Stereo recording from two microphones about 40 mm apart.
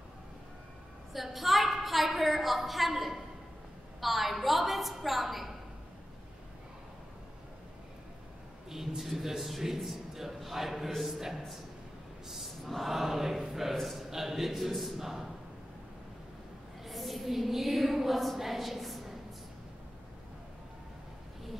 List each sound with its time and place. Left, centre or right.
1.1 s a woman's voice: centre
8.6 s a man's voice: centre
12.6 s choir: centre
13.7 s speech: centre
16.8 s a sound: centre